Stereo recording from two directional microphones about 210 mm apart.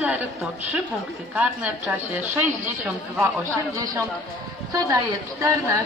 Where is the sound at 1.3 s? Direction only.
10° right (ahead or behind).